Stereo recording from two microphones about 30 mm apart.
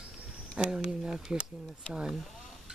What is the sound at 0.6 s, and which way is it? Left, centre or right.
Speech, right.